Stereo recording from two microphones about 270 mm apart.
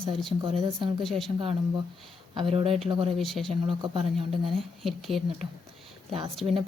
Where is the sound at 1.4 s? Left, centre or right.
Centre.